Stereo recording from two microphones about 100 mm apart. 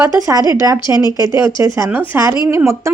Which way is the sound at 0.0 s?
35° right (ahead or behind).